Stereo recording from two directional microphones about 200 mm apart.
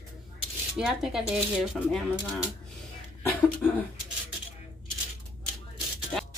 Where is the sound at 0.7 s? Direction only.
5° right (ahead or behind).